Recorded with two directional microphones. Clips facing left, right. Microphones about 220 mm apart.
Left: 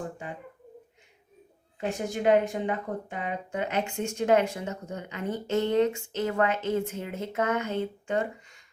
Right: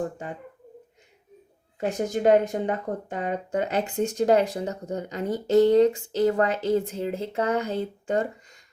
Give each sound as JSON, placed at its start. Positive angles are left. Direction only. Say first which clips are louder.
{"t": 1.9, "sound": "speech", "louder": "right 3 dB", "side_deg": -40}